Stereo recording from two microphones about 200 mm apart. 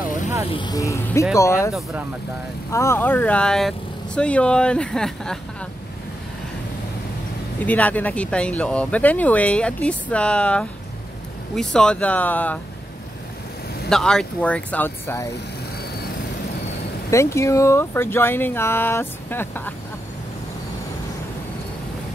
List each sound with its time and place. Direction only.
0.5 s speech: 20° left (ahead or behind)
2.7 s speech: 15° left (ahead or behind)
7.6 s speech: 10° left (ahead or behind)
13.8 s speech: 5° left (ahead or behind)
17.1 s speech: 15° left (ahead or behind)